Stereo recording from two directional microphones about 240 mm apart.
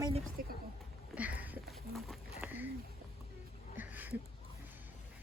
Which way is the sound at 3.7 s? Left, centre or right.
Centre.